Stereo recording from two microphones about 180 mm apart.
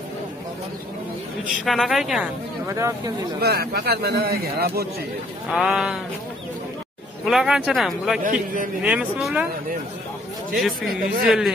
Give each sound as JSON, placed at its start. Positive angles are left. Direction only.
{"t": 1.5, "sound": "speech", "side_deg": 0}
{"t": 3.3, "sound": "speech", "side_deg": -60}
{"t": 5.5, "sound": "speech", "side_deg": 0}
{"t": 7.2, "sound": "speech", "side_deg": 0}
{"t": 8.2, "sound": "a man's voice", "side_deg": -50}
{"t": 8.8, "sound": "speech", "side_deg": -5}
{"t": 10.9, "sound": "speech", "side_deg": 0}